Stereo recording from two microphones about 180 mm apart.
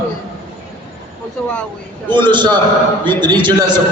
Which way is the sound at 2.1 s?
25° right (ahead or behind).